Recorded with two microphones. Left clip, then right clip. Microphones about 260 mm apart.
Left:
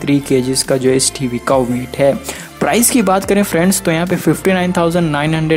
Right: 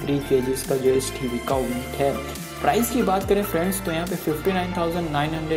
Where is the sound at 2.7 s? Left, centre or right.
Left.